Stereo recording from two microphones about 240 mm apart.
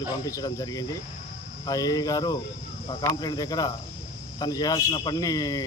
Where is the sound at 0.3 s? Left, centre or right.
Centre.